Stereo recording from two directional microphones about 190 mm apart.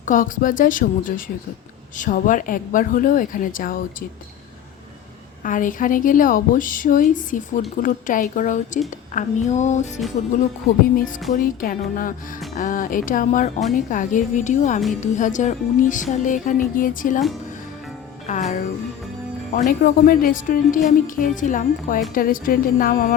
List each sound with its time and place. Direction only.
0.0 s a woman's voice: 45° left (ahead or behind)
5.4 s a woman's voice: 45° left (ahead or behind)
10.9 s a woman's voice: 45° left (ahead or behind)
18.3 s a woman's voice: 40° left (ahead or behind)